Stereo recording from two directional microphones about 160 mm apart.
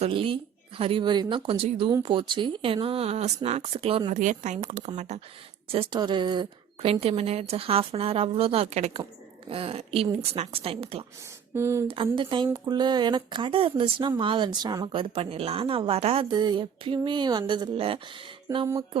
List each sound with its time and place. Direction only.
0.0 s a woman's voice: 35° right (ahead or behind)
4.1 s a woman's voice: 50° right (ahead or behind)
11.5 s speech: 15° right (ahead or behind)
11.9 s a woman's voice: 35° right (ahead or behind)
12.6 s a sound: 25° right (ahead or behind)
14.2 s a woman's voice: 30° right (ahead or behind)
16.3 s a sound: 25° right (ahead or behind)
18.4 s speech: 30° right (ahead or behind)